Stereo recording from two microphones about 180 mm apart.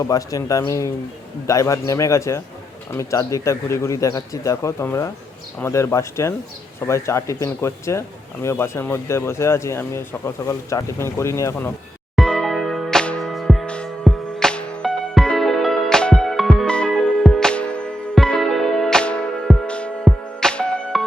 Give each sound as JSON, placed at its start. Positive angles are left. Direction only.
{"t": 0.0, "sound": "speech", "side_deg": 20}
{"t": 12.1, "sound": "music", "side_deg": 0}